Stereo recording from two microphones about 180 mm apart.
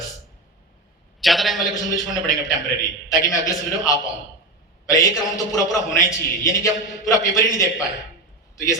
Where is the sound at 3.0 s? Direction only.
20° left (ahead or behind).